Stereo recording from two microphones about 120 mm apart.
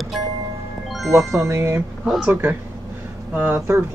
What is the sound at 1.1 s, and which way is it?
Speech, 20° right (ahead or behind).